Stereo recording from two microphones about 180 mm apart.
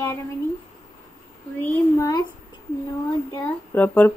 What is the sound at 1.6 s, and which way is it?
Speech, 20° left (ahead or behind).